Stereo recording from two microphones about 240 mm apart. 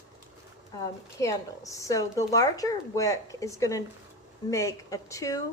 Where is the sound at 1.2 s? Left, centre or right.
Centre.